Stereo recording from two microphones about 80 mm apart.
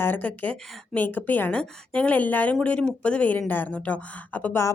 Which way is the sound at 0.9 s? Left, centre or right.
Left.